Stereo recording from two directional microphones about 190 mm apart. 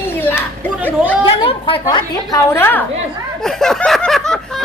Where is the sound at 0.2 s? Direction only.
10° left (ahead or behind).